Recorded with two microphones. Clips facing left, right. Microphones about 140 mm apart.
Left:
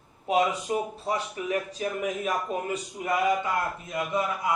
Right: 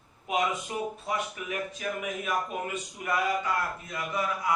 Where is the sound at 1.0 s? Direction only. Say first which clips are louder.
Left 3 dB; 35° left (ahead or behind).